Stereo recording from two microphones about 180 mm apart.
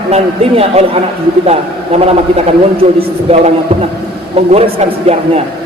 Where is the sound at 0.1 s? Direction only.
35° right (ahead or behind).